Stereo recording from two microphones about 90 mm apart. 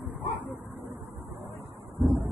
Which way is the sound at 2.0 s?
Centre (ahead or behind).